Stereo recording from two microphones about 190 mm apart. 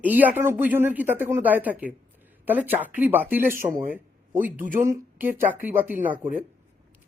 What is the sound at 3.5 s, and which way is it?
Speech, 45° right (ahead or behind).